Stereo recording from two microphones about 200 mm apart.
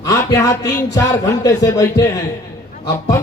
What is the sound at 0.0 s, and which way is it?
Speech, 15° left (ahead or behind).